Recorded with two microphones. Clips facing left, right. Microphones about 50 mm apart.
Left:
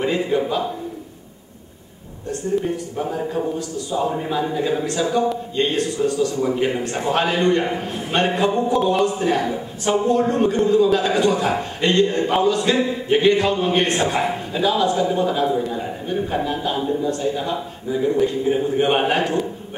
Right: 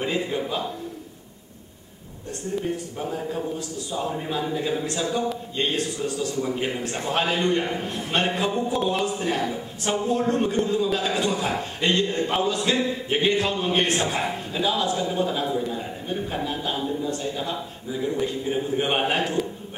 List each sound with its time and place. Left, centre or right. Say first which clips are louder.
0.0 s a man's voice: left 6 dB; centre
3.2 s a man's voice: left 6 dB; centre
4.1 s a man's voice: left 4 dB; centre
9.1 s a man's voice: left 5 dB; centre